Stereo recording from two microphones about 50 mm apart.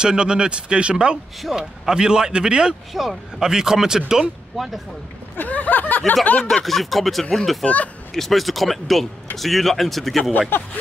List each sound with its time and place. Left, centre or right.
0.0 s speech: centre
2.9 s speech: centre
4.6 s speech: centre
5.4 s a sound: left
6.6 s speech: centre
7.6 s speech: left
8.1 s speech: centre
10.5 s speech: left